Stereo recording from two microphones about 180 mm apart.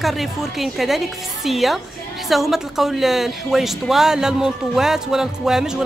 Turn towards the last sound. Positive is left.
turn(degrees=-5)  # may be behind; listen again after turning